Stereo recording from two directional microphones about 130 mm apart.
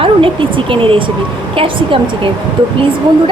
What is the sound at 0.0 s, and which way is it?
Speech, 40° right (ahead or behind).